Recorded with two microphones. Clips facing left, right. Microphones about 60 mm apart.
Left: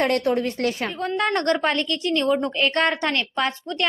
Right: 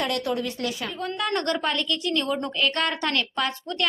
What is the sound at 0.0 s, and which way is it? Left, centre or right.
A woman's voice, left.